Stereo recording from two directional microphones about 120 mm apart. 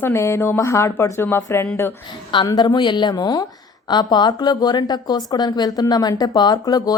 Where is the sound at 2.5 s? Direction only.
35° left (ahead or behind).